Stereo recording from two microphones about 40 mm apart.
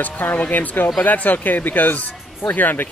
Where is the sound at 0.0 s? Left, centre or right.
Left.